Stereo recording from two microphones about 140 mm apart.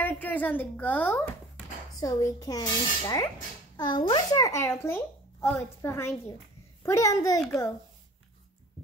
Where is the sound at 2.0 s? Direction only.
25° left (ahead or behind).